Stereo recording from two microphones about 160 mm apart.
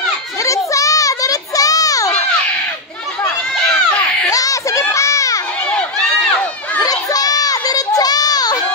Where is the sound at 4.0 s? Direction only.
20° left (ahead or behind).